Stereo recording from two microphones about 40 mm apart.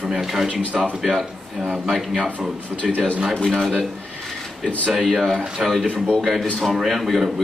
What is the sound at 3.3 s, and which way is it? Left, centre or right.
Speech, centre.